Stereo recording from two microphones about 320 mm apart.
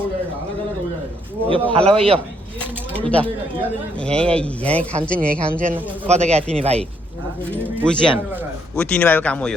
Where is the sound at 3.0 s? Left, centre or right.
Centre.